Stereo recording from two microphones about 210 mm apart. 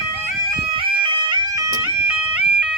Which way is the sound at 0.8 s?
20° right (ahead or behind).